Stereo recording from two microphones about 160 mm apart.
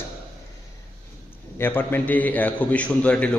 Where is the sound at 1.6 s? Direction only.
10° left (ahead or behind).